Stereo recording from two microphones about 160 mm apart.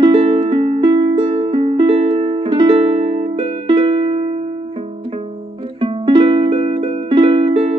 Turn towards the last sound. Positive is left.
turn(degrees=-35)  # may be behind; listen again after turning